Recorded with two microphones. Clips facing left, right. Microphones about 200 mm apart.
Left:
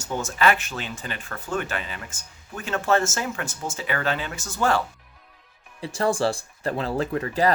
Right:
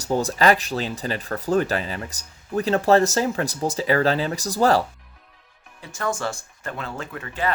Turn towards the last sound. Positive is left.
turn(degrees=35)  # may be behind; listen again after turning